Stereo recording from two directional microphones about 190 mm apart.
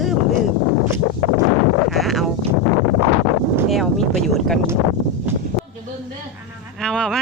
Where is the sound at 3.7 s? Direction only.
Centre (ahead or behind).